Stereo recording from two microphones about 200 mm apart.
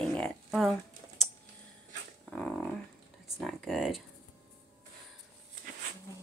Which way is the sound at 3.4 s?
Centre (ahead or behind).